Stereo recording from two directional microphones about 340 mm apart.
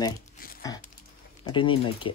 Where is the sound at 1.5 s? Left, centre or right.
Centre.